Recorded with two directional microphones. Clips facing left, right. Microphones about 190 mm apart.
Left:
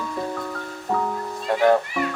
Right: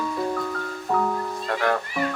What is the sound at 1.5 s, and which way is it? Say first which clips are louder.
Speech: left 7 dB; 20° left (ahead or behind).